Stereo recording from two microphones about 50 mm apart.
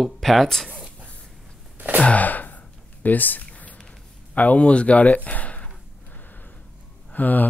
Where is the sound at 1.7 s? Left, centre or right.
Right.